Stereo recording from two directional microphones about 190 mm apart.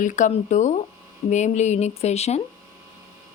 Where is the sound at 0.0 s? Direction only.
40° left (ahead or behind).